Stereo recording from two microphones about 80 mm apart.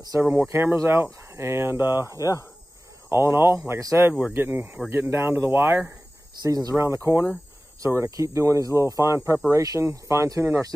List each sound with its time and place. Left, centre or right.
0.2 s speech: right
2.0 s speech: left
3.1 s speech: right
6.4 s speech: right
6.8 s speech: right